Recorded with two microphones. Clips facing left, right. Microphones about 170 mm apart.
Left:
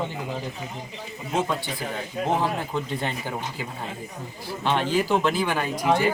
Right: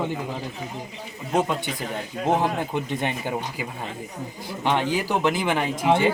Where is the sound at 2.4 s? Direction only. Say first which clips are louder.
Right 2 dB; 20° right (ahead or behind).